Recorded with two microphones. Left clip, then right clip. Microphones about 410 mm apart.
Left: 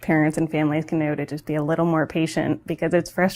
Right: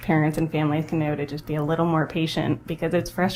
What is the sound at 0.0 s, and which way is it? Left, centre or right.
Speech, left.